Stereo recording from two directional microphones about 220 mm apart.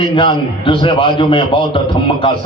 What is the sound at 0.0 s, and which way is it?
A man's voice, 20° left (ahead or behind).